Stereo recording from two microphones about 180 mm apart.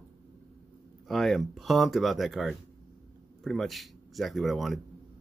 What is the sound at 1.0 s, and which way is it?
Speech, centre (ahead or behind).